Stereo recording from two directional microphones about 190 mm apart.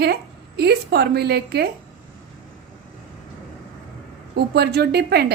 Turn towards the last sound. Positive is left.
turn(degrees=-55)  # may be behind; listen again after turning